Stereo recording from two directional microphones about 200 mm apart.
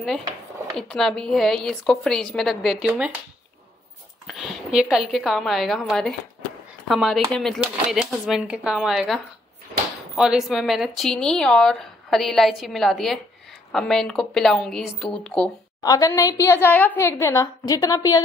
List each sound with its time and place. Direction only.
0.7 s a woman's voice: centre (ahead or behind)
4.3 s a woman's voice: centre (ahead or behind)
15.8 s a woman's voice: 20° left (ahead or behind)